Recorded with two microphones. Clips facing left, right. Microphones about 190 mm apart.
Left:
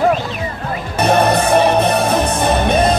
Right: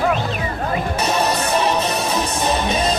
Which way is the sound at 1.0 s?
55° left (ahead or behind).